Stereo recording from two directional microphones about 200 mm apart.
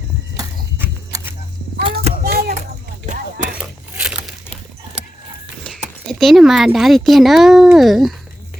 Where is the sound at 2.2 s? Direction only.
50° right (ahead or behind).